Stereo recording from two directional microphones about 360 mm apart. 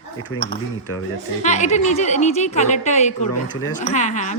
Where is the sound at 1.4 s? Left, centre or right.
Centre.